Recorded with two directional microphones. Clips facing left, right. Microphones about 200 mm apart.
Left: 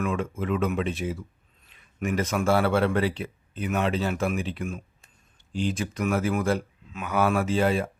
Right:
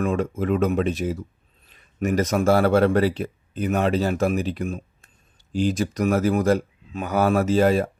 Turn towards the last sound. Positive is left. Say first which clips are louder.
# right 5 dB
turn(degrees=-40)  # may be behind; listen again after turning